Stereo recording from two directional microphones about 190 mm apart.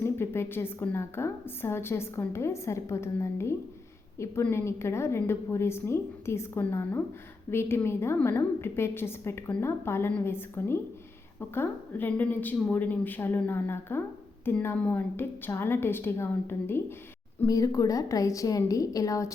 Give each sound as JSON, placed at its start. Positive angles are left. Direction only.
{"t": 0.0, "sound": "a woman's voice", "side_deg": 10}